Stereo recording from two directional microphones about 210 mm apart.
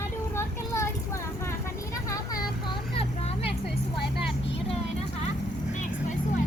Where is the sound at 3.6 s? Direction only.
50° left (ahead or behind).